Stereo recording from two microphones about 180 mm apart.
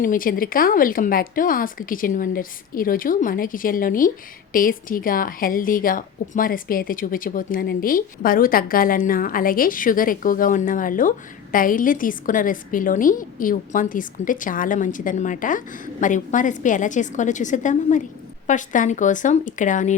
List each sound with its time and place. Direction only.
0.0 s a woman's voice: 50° left (ahead or behind)